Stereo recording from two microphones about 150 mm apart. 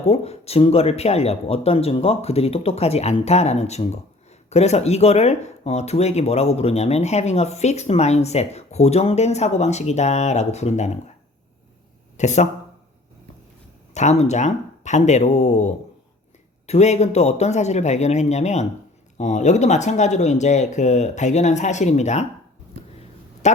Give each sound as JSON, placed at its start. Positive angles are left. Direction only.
{"t": 0.1, "sound": "speech", "side_deg": 45}
{"t": 12.1, "sound": "speech", "side_deg": 50}
{"t": 13.9, "sound": "speech", "side_deg": 50}